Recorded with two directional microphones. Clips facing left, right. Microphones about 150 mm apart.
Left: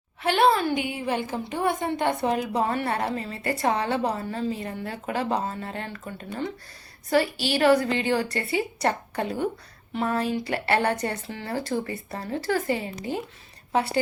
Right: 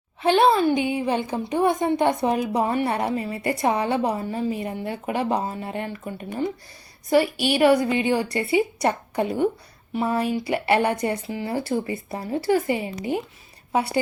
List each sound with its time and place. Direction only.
0.2 s a woman's voice: 20° right (ahead or behind)